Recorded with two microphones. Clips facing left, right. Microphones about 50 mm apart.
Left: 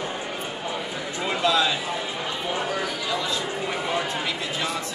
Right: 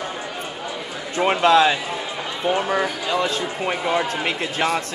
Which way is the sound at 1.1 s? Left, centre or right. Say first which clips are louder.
Right 8 dB; right.